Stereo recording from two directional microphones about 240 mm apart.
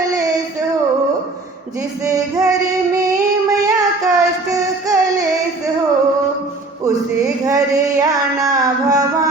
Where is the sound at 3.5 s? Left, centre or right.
Centre.